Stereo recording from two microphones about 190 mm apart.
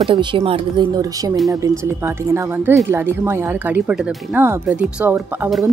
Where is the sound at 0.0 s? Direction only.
25° right (ahead or behind).